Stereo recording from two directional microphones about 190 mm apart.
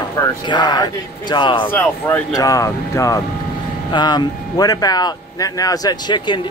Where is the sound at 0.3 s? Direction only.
25° left (ahead or behind).